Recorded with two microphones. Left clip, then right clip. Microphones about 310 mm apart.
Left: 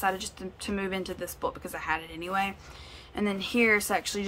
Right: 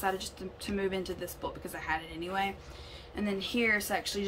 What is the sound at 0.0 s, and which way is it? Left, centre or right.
A woman's voice, centre.